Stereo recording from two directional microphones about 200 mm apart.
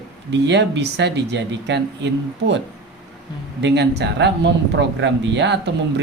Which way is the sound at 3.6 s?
60° right (ahead or behind).